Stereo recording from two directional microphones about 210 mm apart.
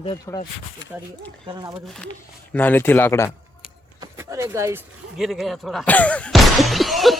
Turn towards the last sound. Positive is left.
turn(degrees=0)  # may be behind; listen again after turning